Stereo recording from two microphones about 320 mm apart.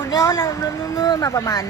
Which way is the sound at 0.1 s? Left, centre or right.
Centre.